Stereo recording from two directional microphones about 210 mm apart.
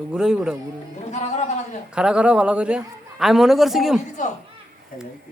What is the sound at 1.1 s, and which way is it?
Speech, 30° left (ahead or behind).